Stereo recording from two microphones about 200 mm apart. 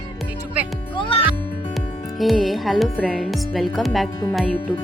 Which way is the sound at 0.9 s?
25° left (ahead or behind).